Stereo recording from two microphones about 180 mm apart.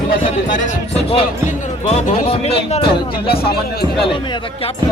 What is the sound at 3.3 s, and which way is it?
Music, 60° left (ahead or behind).